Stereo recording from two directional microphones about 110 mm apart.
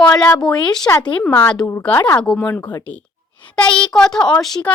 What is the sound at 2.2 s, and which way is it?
Speech, 10° left (ahead or behind).